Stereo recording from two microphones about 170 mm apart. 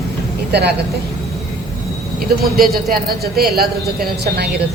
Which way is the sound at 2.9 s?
65° right (ahead or behind).